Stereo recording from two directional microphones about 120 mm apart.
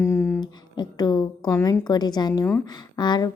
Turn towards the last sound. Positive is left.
turn(degrees=40)  # may be behind; listen again after turning